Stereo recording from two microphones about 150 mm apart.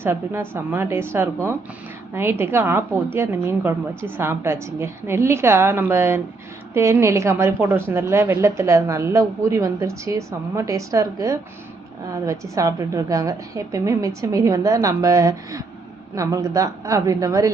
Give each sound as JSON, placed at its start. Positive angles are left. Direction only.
{"t": 0.0, "sound": "a woman's voice", "side_deg": -15}